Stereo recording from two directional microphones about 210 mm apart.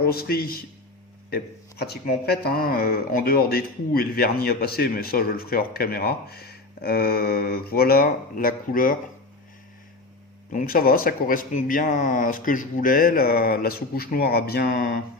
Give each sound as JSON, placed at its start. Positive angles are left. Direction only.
{"t": 0.0, "sound": "speech", "side_deg": 45}
{"t": 1.8, "sound": "speech", "side_deg": 50}
{"t": 10.5, "sound": "speech", "side_deg": 40}